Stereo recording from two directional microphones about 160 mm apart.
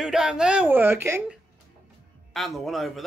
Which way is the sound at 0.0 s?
5° right (ahead or behind).